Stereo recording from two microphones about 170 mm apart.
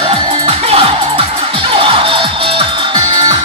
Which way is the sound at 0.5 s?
35° right (ahead or behind).